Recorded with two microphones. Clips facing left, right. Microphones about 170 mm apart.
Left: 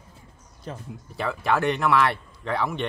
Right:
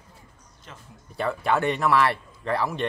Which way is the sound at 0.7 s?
35° left (ahead or behind).